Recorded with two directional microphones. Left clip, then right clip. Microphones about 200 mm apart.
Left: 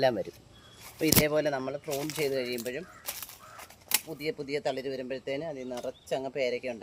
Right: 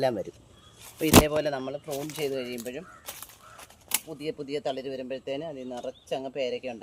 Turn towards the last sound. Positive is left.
turn(degrees=15)  # may be behind; listen again after turning